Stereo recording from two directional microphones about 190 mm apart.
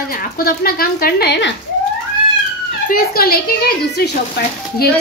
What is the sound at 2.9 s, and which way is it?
A woman's voice, 50° left (ahead or behind).